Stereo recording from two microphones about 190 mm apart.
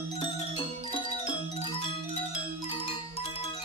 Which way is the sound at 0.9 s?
30° left (ahead or behind).